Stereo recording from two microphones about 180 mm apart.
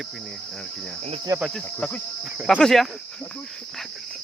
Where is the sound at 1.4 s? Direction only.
5° left (ahead or behind).